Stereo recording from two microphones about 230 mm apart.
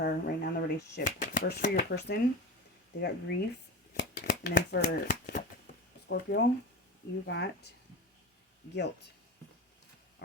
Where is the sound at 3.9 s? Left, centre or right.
Left.